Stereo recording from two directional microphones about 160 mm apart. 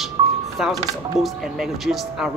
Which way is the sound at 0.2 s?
25° right (ahead or behind).